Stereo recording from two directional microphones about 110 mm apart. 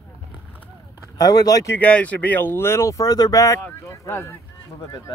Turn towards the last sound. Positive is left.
turn(degrees=25)  # may be behind; listen again after turning